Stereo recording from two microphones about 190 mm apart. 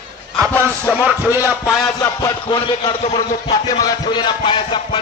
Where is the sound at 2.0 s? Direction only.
20° left (ahead or behind).